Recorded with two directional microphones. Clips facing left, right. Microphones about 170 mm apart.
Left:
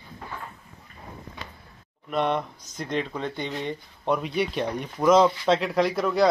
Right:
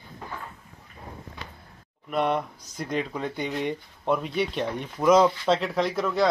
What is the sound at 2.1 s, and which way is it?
A man's voice, 10° right (ahead or behind).